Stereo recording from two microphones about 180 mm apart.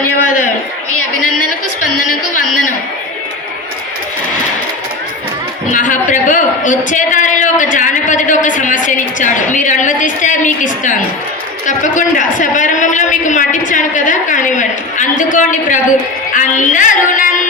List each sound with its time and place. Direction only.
5.7 s a man's voice: 45° left (ahead or behind)